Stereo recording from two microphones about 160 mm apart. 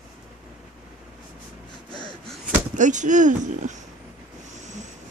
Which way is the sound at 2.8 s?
50° right (ahead or behind).